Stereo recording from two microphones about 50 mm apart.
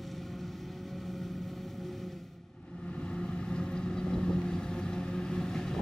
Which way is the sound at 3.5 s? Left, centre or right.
Centre.